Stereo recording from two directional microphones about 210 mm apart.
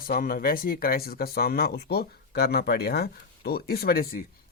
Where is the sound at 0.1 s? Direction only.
45° left (ahead or behind).